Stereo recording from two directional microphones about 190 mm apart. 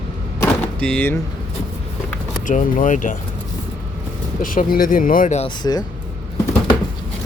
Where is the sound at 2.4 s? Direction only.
40° left (ahead or behind).